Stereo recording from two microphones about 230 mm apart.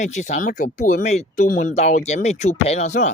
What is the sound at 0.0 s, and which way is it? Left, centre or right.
A man's voice, left.